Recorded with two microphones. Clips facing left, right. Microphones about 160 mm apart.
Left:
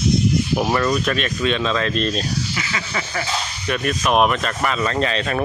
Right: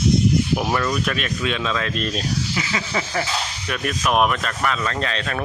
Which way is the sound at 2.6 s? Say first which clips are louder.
Right 2 dB; 20° right (ahead or behind).